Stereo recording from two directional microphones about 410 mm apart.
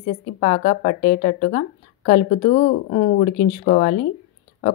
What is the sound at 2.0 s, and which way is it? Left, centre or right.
Speech, centre.